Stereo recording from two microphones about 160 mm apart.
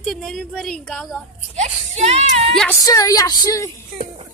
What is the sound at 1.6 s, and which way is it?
Speech, 45° right (ahead or behind).